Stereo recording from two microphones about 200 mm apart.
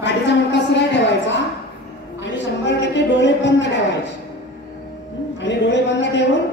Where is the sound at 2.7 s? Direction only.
65° left (ahead or behind).